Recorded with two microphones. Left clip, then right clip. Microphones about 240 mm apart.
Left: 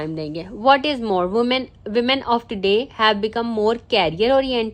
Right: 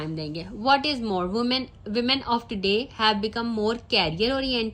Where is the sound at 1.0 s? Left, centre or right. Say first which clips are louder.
Left 7 dB; left.